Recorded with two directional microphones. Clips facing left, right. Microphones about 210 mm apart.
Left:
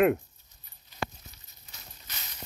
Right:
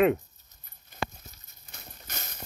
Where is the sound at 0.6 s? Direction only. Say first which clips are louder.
Right 1 dB; 50° right (ahead or behind).